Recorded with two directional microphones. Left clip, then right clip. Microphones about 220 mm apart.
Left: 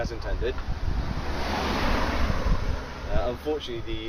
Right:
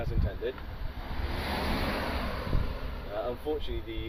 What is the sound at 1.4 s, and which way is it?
Waves, 50° right (ahead or behind).